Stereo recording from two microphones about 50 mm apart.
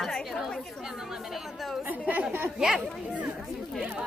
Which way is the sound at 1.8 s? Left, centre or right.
Right.